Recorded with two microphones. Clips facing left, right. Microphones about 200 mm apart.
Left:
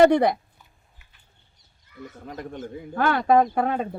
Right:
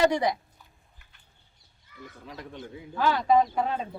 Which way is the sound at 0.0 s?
55° left (ahead or behind).